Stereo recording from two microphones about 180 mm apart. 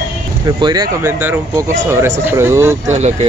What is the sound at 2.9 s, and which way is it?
Speech, 40° right (ahead or behind).